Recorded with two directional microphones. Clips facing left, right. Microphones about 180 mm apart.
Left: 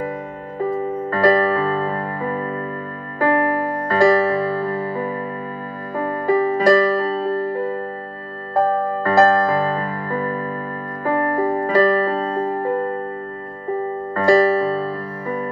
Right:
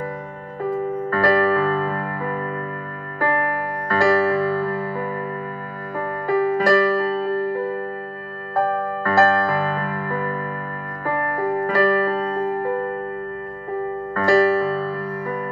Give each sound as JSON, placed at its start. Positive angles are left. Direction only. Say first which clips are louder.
{"t": 1.1, "sound": "music", "louder": "left 2 dB", "side_deg": 20}
{"t": 8.5, "sound": "music", "louder": "left 3 dB", "side_deg": 20}
{"t": 14.1, "sound": "music", "louder": "left 2 dB", "side_deg": 20}